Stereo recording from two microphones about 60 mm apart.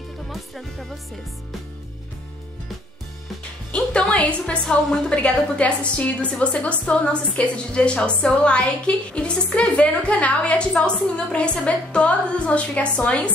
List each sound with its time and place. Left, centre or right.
0.3 s speech: centre
3.7 s music: centre
4.1 s a woman's voice: centre